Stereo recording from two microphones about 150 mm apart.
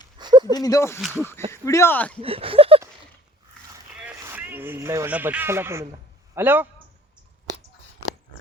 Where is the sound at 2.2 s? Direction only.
40° right (ahead or behind).